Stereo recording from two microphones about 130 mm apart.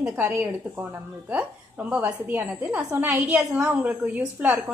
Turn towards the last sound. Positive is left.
turn(degrees=-15)  # may be behind; listen again after turning